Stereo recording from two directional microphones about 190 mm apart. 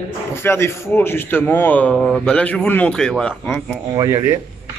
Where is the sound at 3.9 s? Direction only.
15° right (ahead or behind).